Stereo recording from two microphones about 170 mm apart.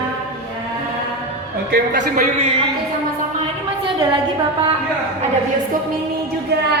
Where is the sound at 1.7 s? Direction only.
50° right (ahead or behind).